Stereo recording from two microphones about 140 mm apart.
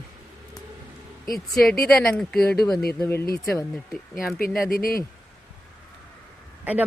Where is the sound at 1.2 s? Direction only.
Centre (ahead or behind).